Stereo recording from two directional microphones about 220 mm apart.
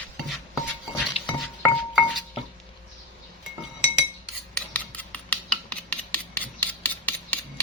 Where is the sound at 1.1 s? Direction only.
25° left (ahead or behind).